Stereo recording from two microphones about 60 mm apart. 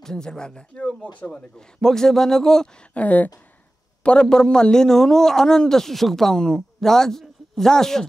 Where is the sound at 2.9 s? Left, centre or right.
Left.